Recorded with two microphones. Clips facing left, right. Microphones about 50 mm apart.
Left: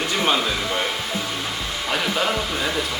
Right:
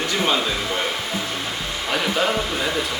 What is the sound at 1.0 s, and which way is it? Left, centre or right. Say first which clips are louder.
Music: even; right.